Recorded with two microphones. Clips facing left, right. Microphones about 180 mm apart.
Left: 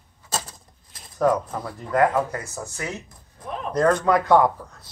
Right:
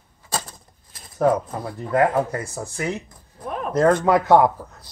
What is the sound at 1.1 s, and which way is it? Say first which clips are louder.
Speech: right 1 dB; 25° right (ahead or behind).